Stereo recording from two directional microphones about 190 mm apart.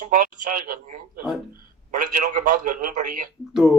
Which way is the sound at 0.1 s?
45° right (ahead or behind).